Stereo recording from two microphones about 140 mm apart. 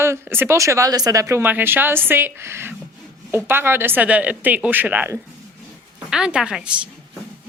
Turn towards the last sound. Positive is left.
turn(degrees=-5)  # may be behind; listen again after turning